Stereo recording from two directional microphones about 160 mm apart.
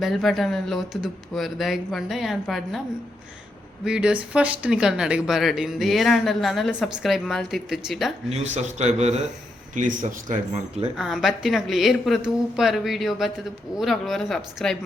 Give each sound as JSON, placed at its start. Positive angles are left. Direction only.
{"t": 0.0, "sound": "speech", "side_deg": 0}
{"t": 3.8, "sound": "speech", "side_deg": -5}
{"t": 8.3, "sound": "a man's voice", "side_deg": -45}
{"t": 10.9, "sound": "speech", "side_deg": 0}